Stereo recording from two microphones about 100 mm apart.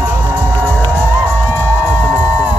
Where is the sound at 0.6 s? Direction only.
15° left (ahead or behind).